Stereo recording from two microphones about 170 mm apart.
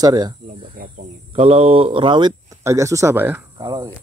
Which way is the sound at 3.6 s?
25° right (ahead or behind).